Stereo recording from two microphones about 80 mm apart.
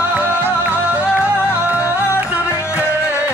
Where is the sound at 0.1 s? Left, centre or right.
Right.